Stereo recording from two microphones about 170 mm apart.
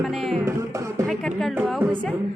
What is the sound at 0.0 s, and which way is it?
Speech, centre (ahead or behind).